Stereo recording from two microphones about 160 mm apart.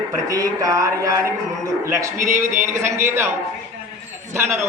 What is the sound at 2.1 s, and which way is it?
Speech, 50° right (ahead or behind).